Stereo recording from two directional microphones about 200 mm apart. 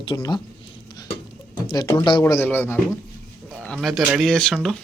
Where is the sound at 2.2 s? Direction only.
10° left (ahead or behind).